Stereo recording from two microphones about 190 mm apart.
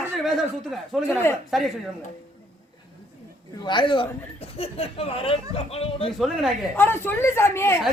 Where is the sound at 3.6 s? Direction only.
25° left (ahead or behind).